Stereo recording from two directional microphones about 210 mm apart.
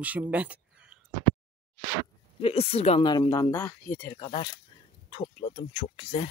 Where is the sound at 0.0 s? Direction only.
5° right (ahead or behind).